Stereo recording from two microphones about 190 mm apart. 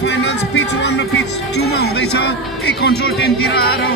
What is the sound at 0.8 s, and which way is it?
Speech, 60° left (ahead or behind).